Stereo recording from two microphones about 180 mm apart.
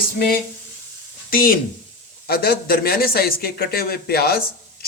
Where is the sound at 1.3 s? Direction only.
55° left (ahead or behind).